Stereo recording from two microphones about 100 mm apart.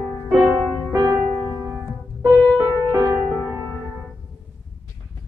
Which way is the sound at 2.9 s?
35° right (ahead or behind).